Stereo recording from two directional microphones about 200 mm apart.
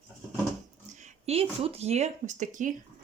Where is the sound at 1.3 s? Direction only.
30° right (ahead or behind).